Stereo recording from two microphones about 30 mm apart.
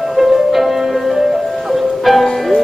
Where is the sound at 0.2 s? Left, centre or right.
Centre.